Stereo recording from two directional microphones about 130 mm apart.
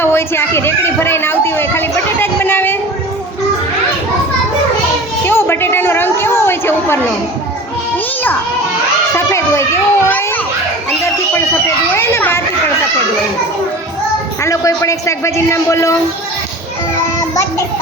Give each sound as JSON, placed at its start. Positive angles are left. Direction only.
{"t": 0.0, "sound": "speech", "side_deg": 20}
{"t": 5.2, "sound": "a sound", "side_deg": 15}
{"t": 9.1, "sound": "children playing", "side_deg": 20}
{"t": 11.9, "sound": "a child's voice", "side_deg": 20}
{"t": 14.4, "sound": "a man's voice", "side_deg": 25}